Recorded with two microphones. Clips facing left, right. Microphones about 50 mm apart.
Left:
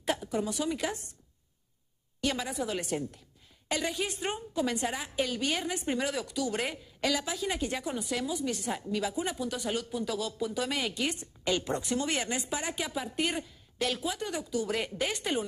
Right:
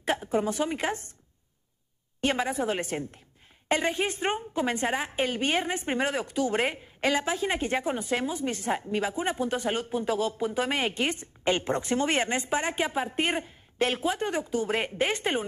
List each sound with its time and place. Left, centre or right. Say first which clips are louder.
0.0 s a woman's voice: right 4 dB; right
2.2 s speech: right 5 dB; right